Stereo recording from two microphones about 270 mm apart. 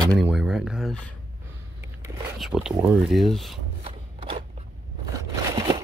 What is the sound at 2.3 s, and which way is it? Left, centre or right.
Speech, centre.